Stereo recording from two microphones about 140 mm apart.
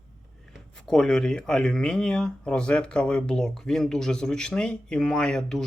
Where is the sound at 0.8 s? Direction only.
5° left (ahead or behind).